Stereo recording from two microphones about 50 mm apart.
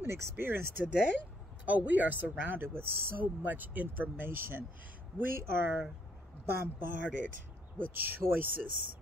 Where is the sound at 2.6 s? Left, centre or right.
Right.